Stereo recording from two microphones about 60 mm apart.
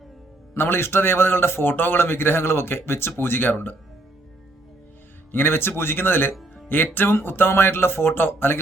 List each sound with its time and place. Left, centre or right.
0.5 s a man's voice: left
5.3 s a man's voice: left